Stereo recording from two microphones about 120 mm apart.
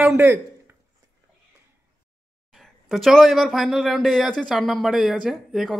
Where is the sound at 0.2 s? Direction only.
20° right (ahead or behind).